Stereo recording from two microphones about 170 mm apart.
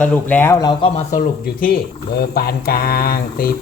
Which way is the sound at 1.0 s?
50° left (ahead or behind).